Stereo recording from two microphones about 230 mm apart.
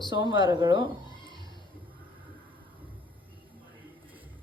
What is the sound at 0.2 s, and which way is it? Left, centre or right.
Speech, right.